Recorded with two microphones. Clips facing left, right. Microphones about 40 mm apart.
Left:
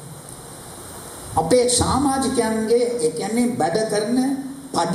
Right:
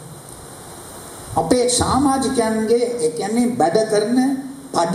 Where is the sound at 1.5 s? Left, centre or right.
Right.